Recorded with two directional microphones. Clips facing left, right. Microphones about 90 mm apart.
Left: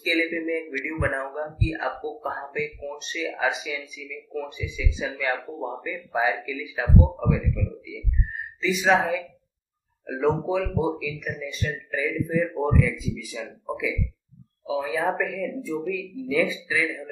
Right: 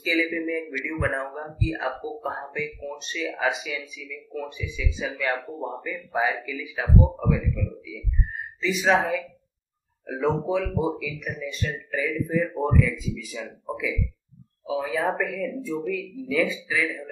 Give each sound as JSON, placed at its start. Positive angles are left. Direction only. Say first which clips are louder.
{"t": 0.0, "sound": "speech", "louder": "even", "side_deg": 5}